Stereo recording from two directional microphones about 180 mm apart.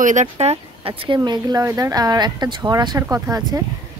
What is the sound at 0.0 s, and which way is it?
Speech, 40° right (ahead or behind).